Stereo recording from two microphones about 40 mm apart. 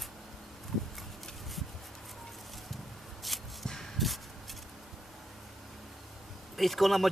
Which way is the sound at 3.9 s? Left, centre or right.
Centre.